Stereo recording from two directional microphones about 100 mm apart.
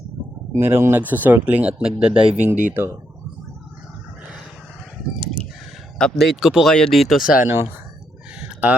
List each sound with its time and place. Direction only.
0.5 s speech: 25° right (ahead or behind)
2.0 s speech: 65° right (ahead or behind)
2.3 s speech: 20° right (ahead or behind)
6.0 s speech: 5° left (ahead or behind)
7.3 s speech: 25° right (ahead or behind)